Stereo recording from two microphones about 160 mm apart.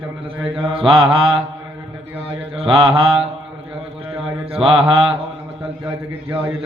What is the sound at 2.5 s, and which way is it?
Mantra, 35° right (ahead or behind).